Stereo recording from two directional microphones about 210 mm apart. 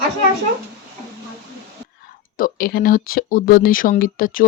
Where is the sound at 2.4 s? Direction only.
45° left (ahead or behind).